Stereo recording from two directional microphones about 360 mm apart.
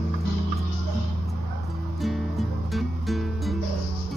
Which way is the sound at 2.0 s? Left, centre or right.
Centre.